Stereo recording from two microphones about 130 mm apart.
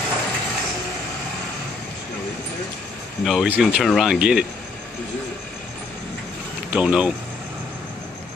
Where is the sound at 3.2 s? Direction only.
Centre (ahead or behind).